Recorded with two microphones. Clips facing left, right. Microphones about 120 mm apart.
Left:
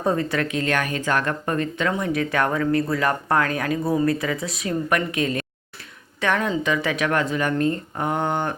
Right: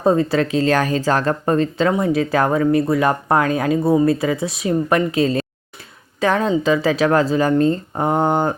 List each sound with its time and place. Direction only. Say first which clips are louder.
0.0 s speech: right 6 dB; 25° right (ahead or behind)